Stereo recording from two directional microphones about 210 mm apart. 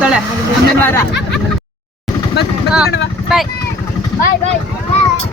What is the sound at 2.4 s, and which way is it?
Speech, 50° left (ahead or behind).